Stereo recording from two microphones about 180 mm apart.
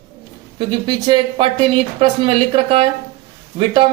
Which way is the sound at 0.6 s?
25° right (ahead or behind).